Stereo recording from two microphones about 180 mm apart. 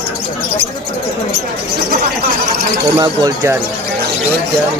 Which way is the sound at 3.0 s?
20° right (ahead or behind).